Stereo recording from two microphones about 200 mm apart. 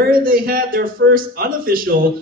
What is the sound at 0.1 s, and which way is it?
A man's voice, 45° right (ahead or behind).